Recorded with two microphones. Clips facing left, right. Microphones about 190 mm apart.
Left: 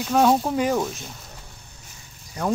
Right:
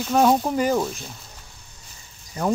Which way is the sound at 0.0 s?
Centre (ahead or behind).